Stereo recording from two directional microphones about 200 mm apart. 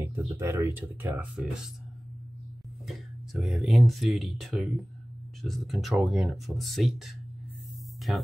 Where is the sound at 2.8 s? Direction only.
Centre (ahead or behind).